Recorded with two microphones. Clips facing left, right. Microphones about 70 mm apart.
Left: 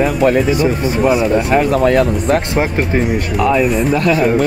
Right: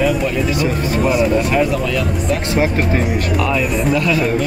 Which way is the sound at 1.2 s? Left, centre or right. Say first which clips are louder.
Left 2 dB; left.